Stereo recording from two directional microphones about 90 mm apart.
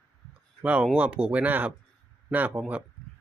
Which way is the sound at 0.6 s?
15° right (ahead or behind).